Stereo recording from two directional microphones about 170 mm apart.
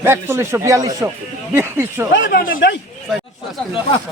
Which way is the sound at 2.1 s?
80° left.